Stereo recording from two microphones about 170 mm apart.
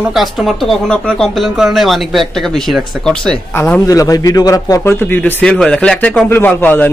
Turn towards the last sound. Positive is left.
turn(degrees=10)  # may be behind; listen again after turning